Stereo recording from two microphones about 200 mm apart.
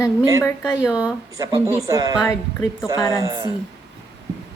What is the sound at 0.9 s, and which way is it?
Speech, 5° right (ahead or behind).